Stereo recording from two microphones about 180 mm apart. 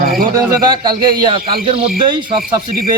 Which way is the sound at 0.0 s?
55° right (ahead or behind).